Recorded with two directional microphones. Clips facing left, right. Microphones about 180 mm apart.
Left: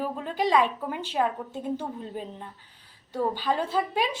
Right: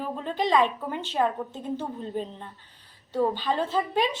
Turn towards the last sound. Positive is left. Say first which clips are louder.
# right 1 dB
turn(degrees=10)  # may be behind; listen again after turning